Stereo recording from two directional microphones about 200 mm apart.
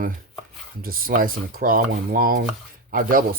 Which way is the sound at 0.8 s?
45° right (ahead or behind).